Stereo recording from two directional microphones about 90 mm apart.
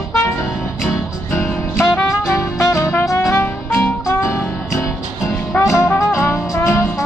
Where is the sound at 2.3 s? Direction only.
30° left (ahead or behind).